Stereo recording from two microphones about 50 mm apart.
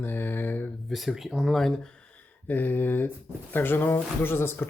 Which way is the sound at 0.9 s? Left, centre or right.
Centre.